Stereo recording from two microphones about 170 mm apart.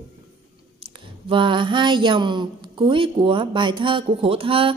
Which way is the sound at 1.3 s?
30° right (ahead or behind).